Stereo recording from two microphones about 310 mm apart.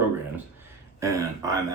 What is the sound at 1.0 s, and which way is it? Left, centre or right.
Speech, centre.